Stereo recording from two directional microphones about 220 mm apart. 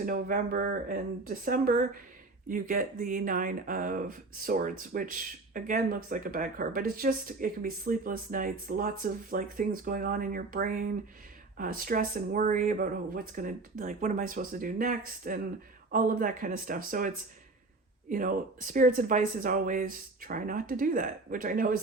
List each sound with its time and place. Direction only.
0.0 s speech: 40° right (ahead or behind)
18.1 s speech: 35° right (ahead or behind)